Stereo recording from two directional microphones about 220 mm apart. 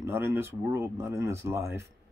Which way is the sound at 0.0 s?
10° right (ahead or behind).